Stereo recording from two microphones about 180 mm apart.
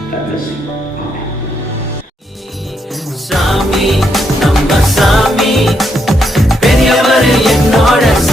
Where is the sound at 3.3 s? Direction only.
Centre (ahead or behind).